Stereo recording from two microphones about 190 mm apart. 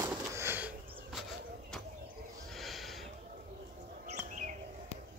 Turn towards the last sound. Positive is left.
turn(degrees=-40)  # may be behind; listen again after turning